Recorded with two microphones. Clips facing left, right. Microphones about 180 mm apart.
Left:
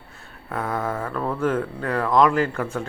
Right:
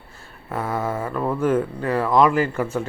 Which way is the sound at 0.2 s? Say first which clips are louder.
Right 1 dB; 5° right (ahead or behind).